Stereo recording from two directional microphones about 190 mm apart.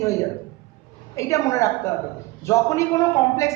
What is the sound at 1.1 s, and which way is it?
A man's voice, 15° left (ahead or behind).